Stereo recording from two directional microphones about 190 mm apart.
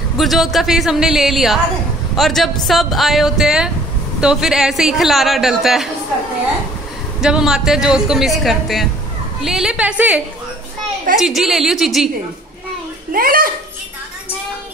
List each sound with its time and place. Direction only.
0.2 s a man's voice: centre (ahead or behind)
7.2 s a man's voice: 5° right (ahead or behind)
13.1 s a child's voice: 50° right (ahead or behind)